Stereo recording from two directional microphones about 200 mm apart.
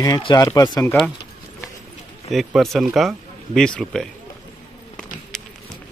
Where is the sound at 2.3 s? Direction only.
Centre (ahead or behind).